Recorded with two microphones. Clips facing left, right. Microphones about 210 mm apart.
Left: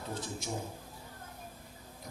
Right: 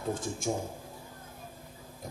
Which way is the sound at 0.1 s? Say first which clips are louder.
Right 8 dB; 50° right (ahead or behind).